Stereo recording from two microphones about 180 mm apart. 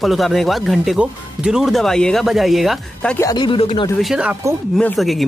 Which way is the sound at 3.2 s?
25° left (ahead or behind).